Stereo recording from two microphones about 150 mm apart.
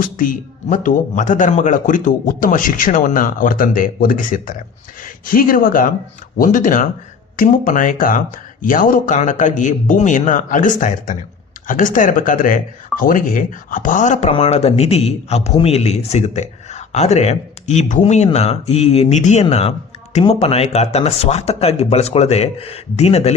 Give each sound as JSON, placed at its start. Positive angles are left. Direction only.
{"t": 0.0, "sound": "speech", "side_deg": 65}
{"t": 14.3, "sound": "a man's voice", "side_deg": 45}
{"t": 18.0, "sound": "speech", "side_deg": 45}